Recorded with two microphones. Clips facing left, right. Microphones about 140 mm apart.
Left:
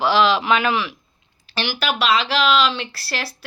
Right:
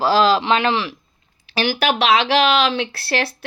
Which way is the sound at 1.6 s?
55° right (ahead or behind).